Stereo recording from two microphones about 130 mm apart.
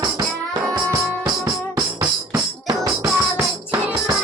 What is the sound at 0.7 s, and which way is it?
Music, 25° right (ahead or behind).